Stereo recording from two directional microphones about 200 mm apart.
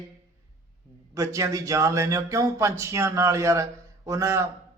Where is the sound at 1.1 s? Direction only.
15° right (ahead or behind).